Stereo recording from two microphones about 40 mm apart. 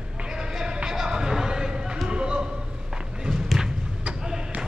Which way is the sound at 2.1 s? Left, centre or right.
Right.